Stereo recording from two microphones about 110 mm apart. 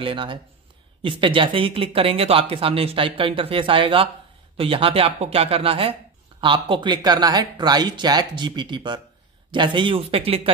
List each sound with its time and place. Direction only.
0.0 s speech: 50° right (ahead or behind)